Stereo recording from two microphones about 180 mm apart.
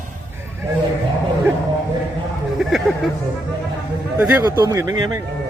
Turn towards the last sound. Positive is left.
turn(degrees=-20)  # may be behind; listen again after turning